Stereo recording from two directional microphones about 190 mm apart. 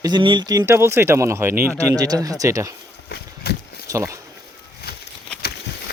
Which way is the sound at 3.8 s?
15° right (ahead or behind).